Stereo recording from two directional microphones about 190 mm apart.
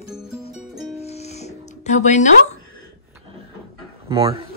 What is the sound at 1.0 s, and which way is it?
Music, 35° left (ahead or behind).